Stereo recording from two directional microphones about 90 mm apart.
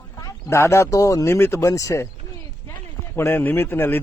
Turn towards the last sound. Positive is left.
turn(degrees=25)  # may be behind; listen again after turning